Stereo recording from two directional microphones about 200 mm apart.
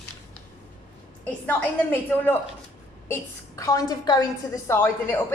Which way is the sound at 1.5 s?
10° left (ahead or behind).